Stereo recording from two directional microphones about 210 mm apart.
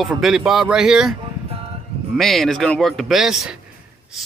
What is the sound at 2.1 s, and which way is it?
Speech, centre (ahead or behind).